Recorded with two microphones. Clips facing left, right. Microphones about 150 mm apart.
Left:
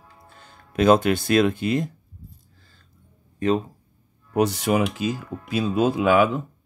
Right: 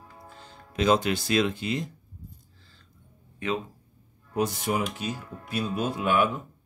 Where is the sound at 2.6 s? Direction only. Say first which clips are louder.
Even; 45° left (ahead or behind).